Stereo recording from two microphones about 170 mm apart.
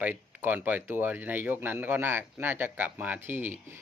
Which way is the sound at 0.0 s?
10° right (ahead or behind).